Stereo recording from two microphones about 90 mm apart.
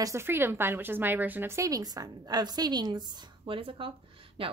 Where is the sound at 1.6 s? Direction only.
40° right (ahead or behind).